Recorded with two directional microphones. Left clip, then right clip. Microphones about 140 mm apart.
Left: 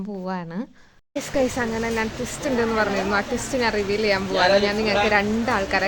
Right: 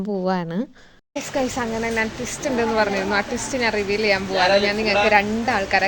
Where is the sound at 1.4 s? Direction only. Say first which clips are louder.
Left 1 dB; 10° left (ahead or behind).